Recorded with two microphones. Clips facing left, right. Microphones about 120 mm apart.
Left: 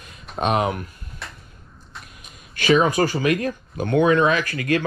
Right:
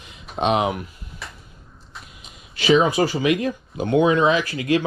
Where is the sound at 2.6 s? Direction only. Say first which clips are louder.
Right 1 dB; 15° right (ahead or behind).